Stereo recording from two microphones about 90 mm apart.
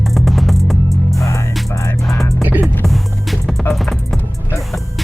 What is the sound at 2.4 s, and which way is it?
Music, 20° right (ahead or behind).